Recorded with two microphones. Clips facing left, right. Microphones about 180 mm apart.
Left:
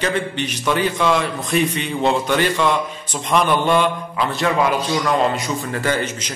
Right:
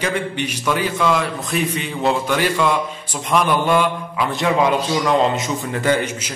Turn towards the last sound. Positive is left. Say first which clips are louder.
# right 3 dB
turn(degrees=-15)  # may be behind; listen again after turning